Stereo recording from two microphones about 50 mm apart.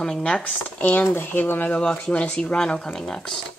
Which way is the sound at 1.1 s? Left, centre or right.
Left.